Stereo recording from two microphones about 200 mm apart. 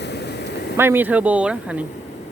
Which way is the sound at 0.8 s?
10° right (ahead or behind).